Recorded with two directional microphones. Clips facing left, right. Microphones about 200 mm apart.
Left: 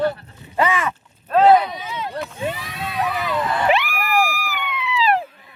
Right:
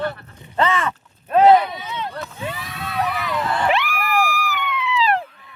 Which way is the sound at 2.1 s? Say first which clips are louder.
Left 4 dB; 20° left (ahead or behind).